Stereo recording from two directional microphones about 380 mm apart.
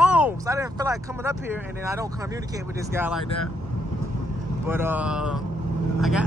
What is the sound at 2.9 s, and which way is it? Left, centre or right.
Speech, centre.